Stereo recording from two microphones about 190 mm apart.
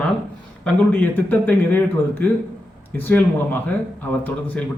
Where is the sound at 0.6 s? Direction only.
10° left (ahead or behind).